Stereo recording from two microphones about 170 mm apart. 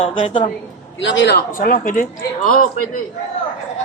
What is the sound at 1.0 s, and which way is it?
A woman's voice, 90° left.